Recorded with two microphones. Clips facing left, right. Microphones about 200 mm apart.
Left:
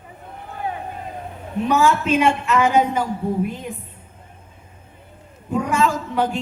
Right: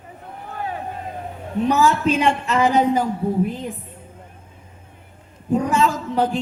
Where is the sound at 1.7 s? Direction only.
35° right (ahead or behind).